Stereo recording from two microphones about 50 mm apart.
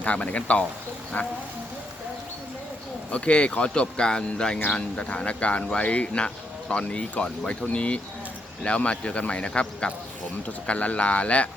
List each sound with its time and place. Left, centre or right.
0.0 s speech: left
3.1 s speech: left